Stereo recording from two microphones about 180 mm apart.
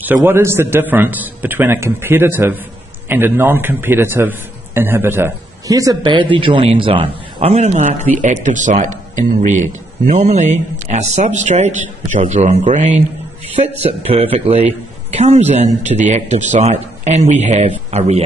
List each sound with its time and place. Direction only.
0.0 s a man's voice: 10° right (ahead or behind); by 13.0 s 45° right (ahead or behind)
13.6 s a man's voice: 35° right (ahead or behind)